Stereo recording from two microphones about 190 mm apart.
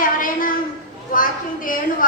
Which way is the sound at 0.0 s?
45° left (ahead or behind).